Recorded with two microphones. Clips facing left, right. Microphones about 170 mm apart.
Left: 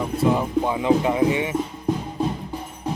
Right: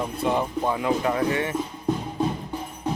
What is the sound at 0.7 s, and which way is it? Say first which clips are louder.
Speech: left 4 dB; 15° left (ahead or behind).